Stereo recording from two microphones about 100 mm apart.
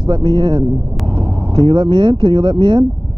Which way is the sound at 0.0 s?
50° right (ahead or behind).